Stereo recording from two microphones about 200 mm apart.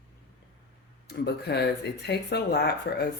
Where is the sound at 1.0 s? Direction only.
55° left (ahead or behind).